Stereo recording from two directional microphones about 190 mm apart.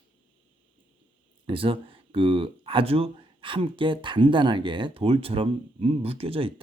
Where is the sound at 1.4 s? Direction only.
25° right (ahead or behind).